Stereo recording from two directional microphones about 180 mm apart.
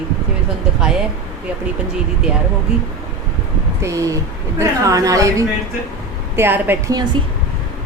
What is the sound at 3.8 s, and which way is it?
A woman's voice, 15° right (ahead or behind).